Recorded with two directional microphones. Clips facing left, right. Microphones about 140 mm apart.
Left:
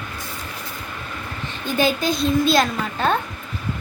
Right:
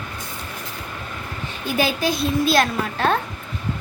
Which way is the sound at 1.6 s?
5° right (ahead or behind).